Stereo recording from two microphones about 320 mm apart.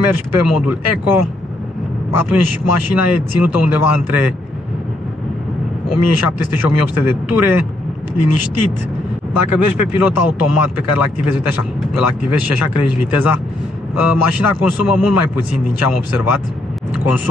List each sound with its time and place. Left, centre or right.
0.0 s speech: left
5.9 s speech: left
9.3 s speech: left